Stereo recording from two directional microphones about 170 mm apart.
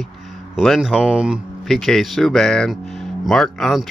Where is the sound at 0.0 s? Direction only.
Centre (ahead or behind).